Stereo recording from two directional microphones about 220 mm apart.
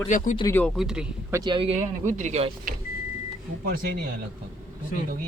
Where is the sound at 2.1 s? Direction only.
35° right (ahead or behind).